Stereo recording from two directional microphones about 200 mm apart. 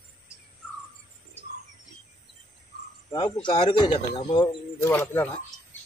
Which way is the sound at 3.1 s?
25° left (ahead or behind).